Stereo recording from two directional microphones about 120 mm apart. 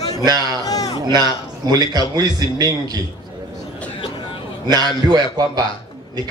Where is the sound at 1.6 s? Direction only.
35° right (ahead or behind).